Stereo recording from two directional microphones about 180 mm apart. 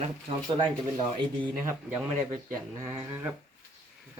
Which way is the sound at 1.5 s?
10° right (ahead or behind).